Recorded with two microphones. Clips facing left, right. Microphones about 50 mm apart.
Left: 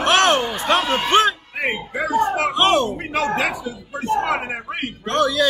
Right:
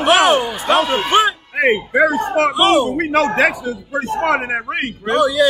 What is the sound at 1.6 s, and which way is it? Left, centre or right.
Speech, right.